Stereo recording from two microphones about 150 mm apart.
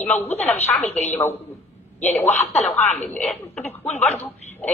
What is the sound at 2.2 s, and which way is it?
Speech, 45° left (ahead or behind).